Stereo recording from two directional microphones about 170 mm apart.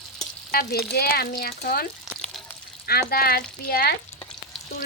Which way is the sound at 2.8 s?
65° left (ahead or behind).